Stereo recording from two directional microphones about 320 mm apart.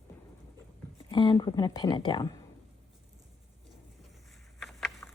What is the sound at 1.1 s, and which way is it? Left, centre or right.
A woman's voice, centre.